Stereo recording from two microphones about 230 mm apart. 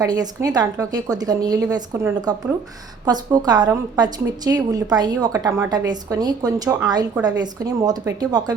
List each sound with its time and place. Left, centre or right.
0.0 s a woman's voice: centre